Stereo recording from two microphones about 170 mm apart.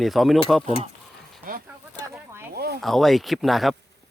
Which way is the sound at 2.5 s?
75° right (ahead or behind).